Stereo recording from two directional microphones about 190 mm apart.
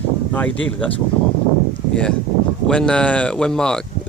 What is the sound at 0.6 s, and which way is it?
Speech, 5° left (ahead or behind).